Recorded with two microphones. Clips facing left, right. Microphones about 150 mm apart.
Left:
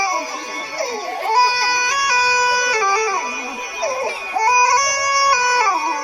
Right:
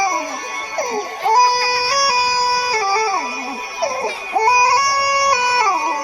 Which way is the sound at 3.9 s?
25° right (ahead or behind).